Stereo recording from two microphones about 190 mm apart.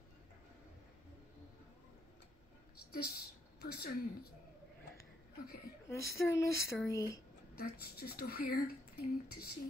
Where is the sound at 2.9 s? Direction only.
55° left (ahead or behind).